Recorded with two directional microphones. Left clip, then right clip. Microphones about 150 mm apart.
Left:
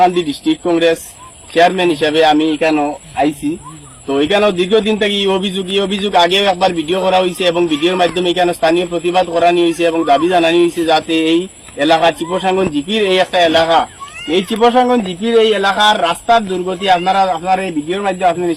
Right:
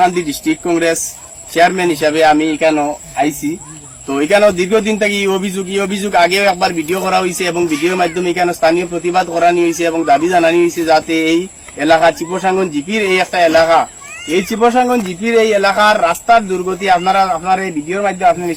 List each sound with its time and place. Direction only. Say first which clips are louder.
0.0 s a man's voice: left 1 dB; 15° right (ahead or behind)